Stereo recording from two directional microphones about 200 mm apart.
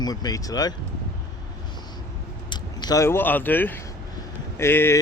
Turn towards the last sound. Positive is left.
turn(degrees=10)  # may be behind; listen again after turning